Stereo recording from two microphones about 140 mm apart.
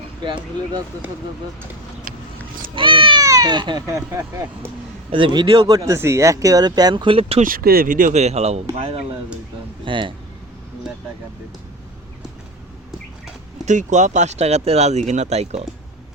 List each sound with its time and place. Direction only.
0.2 s speech: 35° right (ahead or behind)
2.7 s a sound: 40° right (ahead or behind)
3.2 s speech: 25° right (ahead or behind)
3.8 s speech: 20° right (ahead or behind)
5.1 s speech: 35° right (ahead or behind)
5.7 s speech: 20° right (ahead or behind); by 7.4 s 45° right (ahead or behind)
7.4 s speech: 90° right; by 10.2 s 35° right (ahead or behind)
13.7 s speech: 60° right (ahead or behind)